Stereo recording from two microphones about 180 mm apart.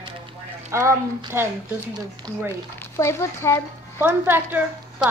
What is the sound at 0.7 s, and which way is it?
Speech, 15° right (ahead or behind).